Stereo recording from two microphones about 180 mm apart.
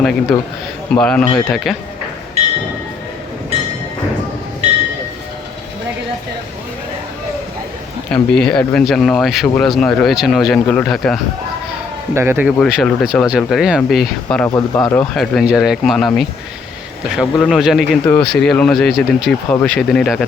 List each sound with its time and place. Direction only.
0.0 s speech: centre (ahead or behind)
4.6 s train: 35° right (ahead or behind)
8.1 s speech: 5° left (ahead or behind)
12.1 s speech: 15° right (ahead or behind)
12.5 s speech: centre (ahead or behind)
14.5 s speech: 15° left (ahead or behind)
15.1 s speech: centre (ahead or behind)